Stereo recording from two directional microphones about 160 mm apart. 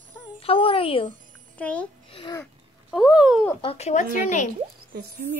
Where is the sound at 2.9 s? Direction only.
5° right (ahead or behind).